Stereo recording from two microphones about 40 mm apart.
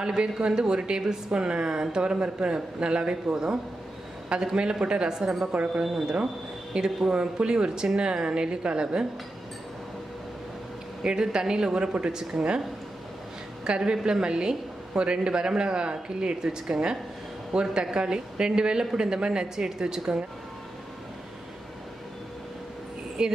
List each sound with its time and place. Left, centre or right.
0.0 s a woman's voice: right
5.5 s a woman's voice: right
5.9 s a woman's voice: centre
6.7 s a woman's voice: centre
11.0 s a woman's voice: centre
13.7 s a woman's voice: right
23.2 s a woman's voice: centre